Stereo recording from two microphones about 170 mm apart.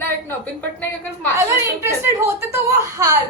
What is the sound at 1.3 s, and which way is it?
A woman's voice, 15° right (ahead or behind).